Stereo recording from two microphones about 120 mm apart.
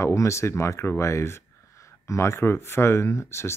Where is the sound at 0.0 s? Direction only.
25° left (ahead or behind).